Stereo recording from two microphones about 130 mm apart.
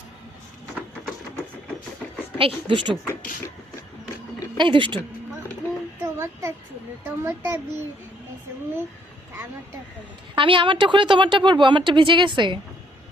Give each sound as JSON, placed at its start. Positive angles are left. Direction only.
{"t": 2.4, "sound": "speech", "side_deg": -40}
{"t": 4.5, "sound": "speech", "side_deg": -40}
{"t": 6.0, "sound": "child singing", "side_deg": -20}
{"t": 7.2, "sound": "a child's voice", "side_deg": -15}
{"t": 10.3, "sound": "speech", "side_deg": -40}